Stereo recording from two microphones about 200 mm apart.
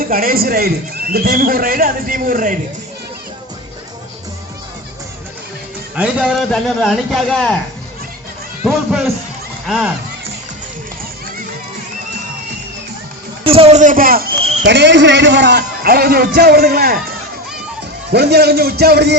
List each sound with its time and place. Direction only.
0.0 s a man's voice: 45° right (ahead or behind)
6.0 s a man's voice: centre (ahead or behind)
8.6 s a man's voice: centre (ahead or behind)
13.4 s a man's voice: 25° right (ahead or behind); by 14.5 s 50° right (ahead or behind)
14.6 s a man's voice: 60° right (ahead or behind)
18.1 s a man's voice: 55° right (ahead or behind)